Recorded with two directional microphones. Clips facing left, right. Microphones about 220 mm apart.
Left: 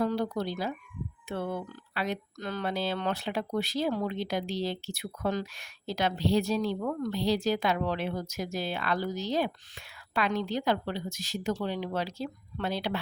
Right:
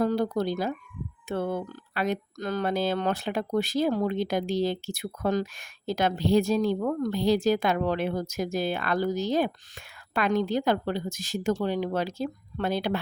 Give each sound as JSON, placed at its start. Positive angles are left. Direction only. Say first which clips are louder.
{"t": 0.0, "sound": "speech", "louder": "right 4 dB", "side_deg": -45}